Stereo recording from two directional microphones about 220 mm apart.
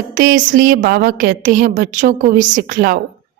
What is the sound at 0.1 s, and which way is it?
A woman's voice, 35° right (ahead or behind).